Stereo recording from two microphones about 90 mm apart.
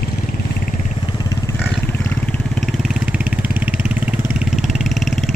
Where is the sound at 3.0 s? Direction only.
15° right (ahead or behind).